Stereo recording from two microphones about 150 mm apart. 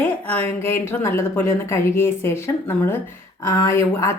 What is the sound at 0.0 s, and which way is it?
A woman's voice, 15° left (ahead or behind).